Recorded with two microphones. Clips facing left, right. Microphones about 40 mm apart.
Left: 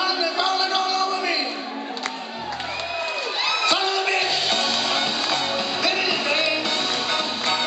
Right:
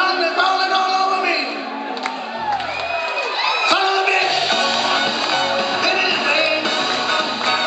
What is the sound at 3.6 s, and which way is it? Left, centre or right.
Music, centre.